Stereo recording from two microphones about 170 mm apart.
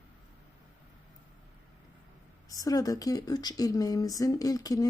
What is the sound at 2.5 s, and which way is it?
Speech, 20° left (ahead or behind).